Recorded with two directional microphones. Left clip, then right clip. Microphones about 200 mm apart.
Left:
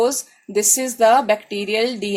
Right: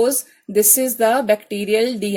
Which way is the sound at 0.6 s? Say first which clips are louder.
Left 1 dB; 50° right (ahead or behind).